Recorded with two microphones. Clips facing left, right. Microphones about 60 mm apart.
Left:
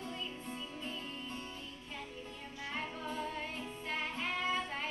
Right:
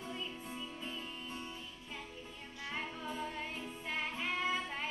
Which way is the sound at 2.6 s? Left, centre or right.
Centre.